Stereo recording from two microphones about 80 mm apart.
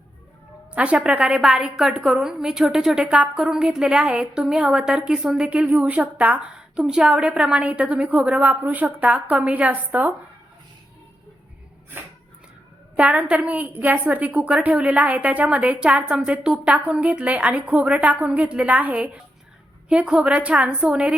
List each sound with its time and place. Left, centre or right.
0.7 s a woman's voice: centre
13.0 s a woman's voice: centre